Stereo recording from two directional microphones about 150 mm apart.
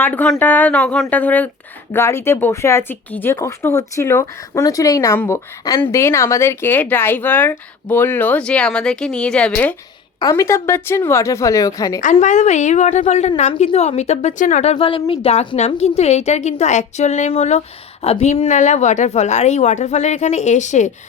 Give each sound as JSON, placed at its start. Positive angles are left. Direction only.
{"t": 0.0, "sound": "speech", "side_deg": 10}
{"t": 10.2, "sound": "speech", "side_deg": 20}
{"t": 12.2, "sound": "a woman's voice", "side_deg": 50}